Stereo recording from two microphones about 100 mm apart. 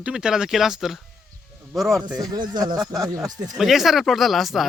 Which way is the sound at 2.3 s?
45° right (ahead or behind).